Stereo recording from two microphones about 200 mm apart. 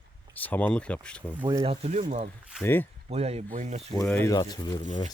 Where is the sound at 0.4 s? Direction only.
10° left (ahead or behind).